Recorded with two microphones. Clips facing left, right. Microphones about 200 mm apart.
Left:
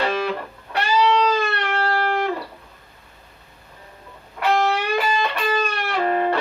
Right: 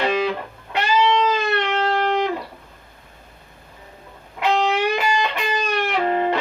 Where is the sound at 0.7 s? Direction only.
20° right (ahead or behind).